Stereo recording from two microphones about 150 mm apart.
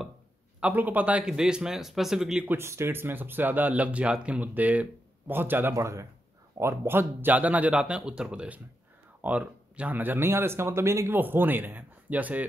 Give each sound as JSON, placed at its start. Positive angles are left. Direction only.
{"t": 0.6, "sound": "a man's voice", "side_deg": -10}
{"t": 2.5, "sound": "speech", "side_deg": -15}